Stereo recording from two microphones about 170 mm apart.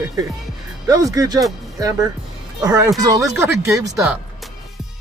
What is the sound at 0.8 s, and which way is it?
Speech, 20° right (ahead or behind).